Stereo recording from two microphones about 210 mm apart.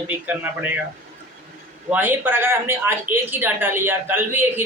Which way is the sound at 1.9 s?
10° right (ahead or behind).